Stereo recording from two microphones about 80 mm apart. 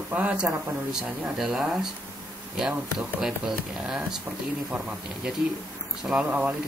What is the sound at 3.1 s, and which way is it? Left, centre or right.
Speech, centre.